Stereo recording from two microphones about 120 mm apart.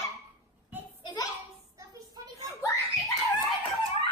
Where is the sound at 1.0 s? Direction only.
35° left (ahead or behind).